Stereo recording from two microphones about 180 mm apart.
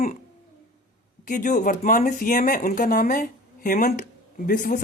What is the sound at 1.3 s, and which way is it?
Speech, 45° left (ahead or behind).